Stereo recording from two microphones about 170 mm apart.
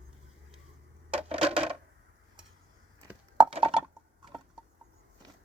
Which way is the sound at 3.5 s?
30° right (ahead or behind).